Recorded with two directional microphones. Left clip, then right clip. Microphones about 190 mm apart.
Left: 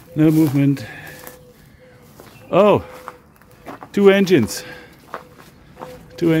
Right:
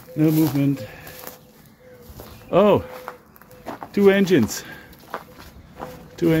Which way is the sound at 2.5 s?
30° left (ahead or behind).